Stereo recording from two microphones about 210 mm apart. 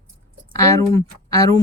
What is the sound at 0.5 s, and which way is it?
Speech, 15° left (ahead or behind).